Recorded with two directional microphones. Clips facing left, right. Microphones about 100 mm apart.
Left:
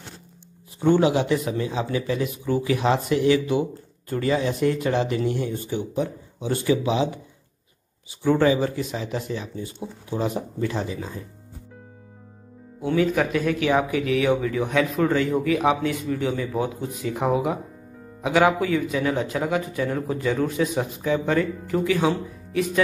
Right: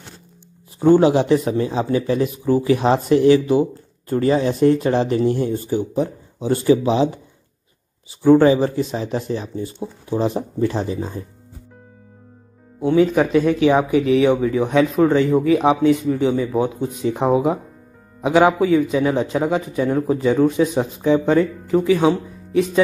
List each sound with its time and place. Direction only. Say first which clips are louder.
0.7 s speech: right 6 dB; 35° right (ahead or behind)
8.2 s speech: right 7 dB; 35° right (ahead or behind)
12.8 s speech: right 6 dB; 25° right (ahead or behind)